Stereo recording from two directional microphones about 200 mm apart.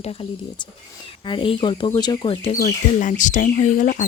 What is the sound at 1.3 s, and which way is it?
Speech, 25° left (ahead or behind).